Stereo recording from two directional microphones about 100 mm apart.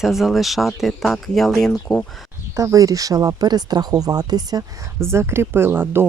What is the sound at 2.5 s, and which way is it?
Speech, 35° right (ahead or behind).